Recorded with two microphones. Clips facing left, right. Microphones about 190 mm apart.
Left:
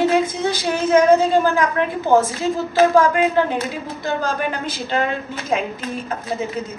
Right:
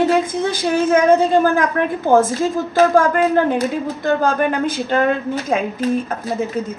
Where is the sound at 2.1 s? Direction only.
50° right (ahead or behind).